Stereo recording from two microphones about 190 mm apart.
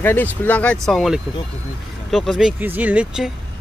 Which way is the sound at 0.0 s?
10° left (ahead or behind).